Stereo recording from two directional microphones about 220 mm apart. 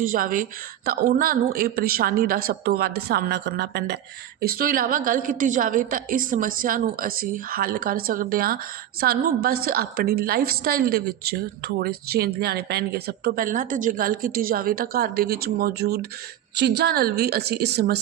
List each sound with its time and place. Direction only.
0.0 s a woman's voice: 40° right (ahead or behind)